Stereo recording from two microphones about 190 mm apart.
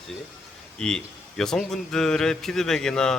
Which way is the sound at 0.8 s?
5° left (ahead or behind).